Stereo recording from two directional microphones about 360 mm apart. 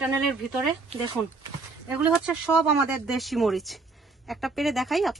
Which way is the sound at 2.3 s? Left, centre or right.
Centre.